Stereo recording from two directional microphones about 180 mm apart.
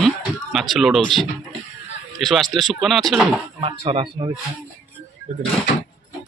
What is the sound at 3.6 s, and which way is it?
Speech, 30° right (ahead or behind).